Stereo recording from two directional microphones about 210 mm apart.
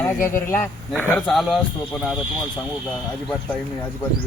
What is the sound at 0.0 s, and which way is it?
Speech, 10° left (ahead or behind).